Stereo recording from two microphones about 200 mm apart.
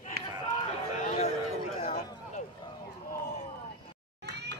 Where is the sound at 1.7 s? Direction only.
30° left (ahead or behind).